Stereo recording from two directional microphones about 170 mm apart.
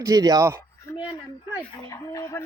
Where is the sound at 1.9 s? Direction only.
20° left (ahead or behind).